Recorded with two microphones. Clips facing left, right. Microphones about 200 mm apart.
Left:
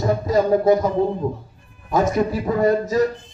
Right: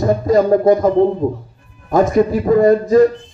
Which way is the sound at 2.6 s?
50° right (ahead or behind).